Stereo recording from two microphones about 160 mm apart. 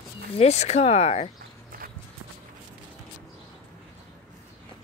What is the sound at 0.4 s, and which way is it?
Speech, 40° left (ahead or behind).